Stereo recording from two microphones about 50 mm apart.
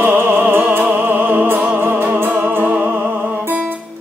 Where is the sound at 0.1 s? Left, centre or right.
Right.